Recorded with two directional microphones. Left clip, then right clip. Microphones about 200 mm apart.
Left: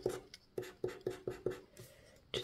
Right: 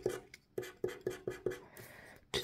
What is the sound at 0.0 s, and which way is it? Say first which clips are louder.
Writing: right 1 dB; 10° left (ahead or behind).